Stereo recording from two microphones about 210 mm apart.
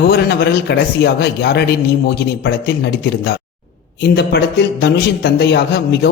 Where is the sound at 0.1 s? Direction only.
50° left (ahead or behind).